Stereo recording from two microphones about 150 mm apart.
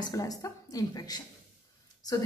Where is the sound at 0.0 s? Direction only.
25° left (ahead or behind).